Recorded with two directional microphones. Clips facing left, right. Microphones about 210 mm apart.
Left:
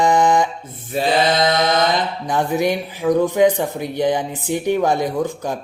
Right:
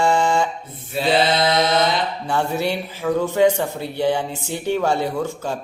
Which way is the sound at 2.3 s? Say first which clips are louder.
Left 4 dB; 15° left (ahead or behind).